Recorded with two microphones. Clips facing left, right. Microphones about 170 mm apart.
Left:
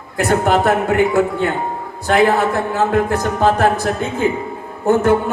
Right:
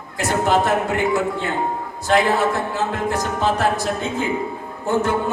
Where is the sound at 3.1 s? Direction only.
55° left (ahead or behind).